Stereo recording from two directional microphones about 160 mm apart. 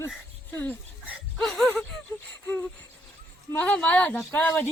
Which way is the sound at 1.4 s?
5° left (ahead or behind).